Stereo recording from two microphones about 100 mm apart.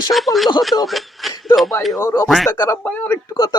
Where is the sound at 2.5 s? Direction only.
35° left (ahead or behind).